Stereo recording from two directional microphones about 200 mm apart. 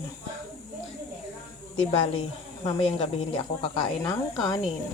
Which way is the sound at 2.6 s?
25° left (ahead or behind).